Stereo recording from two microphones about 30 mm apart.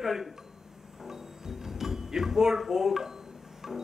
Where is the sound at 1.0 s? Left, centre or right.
Centre.